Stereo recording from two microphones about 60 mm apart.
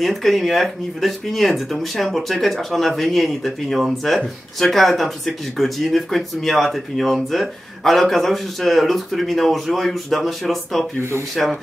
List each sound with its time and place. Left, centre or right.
0.0 s speech: centre
11.0 s speech: right